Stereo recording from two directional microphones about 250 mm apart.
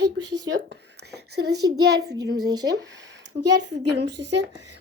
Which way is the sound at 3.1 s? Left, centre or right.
Right.